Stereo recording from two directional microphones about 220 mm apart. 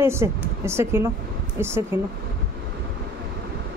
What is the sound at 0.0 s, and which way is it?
Speech, 10° right (ahead or behind).